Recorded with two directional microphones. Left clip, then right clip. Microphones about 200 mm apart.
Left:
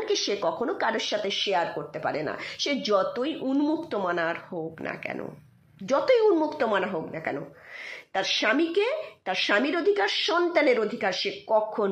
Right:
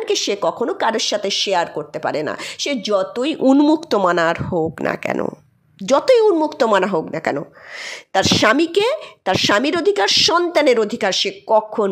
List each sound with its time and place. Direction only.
0.0 s speech: 40° right (ahead or behind)
3.4 s a woman's voice: 60° right (ahead or behind); by 11.9 s 35° right (ahead or behind)